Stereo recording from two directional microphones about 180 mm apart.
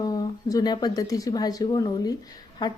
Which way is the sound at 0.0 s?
20° left (ahead or behind).